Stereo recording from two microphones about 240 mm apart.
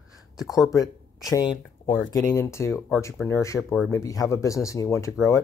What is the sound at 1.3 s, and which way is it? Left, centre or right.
Speech, centre.